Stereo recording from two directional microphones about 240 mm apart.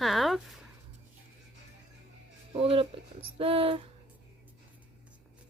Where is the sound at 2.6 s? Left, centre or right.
Right.